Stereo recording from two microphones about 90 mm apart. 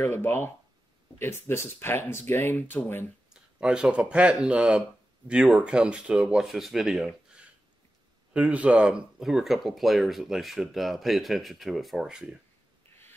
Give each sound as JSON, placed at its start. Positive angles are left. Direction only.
{"t": 0.0, "sound": "speech", "side_deg": 20}
{"t": 3.3, "sound": "speech", "side_deg": -10}
{"t": 8.3, "sound": "speech", "side_deg": -15}